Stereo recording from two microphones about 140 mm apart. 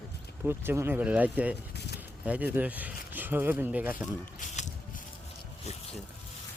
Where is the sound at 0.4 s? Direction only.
15° right (ahead or behind).